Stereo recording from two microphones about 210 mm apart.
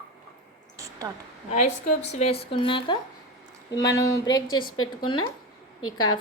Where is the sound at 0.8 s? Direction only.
15° right (ahead or behind).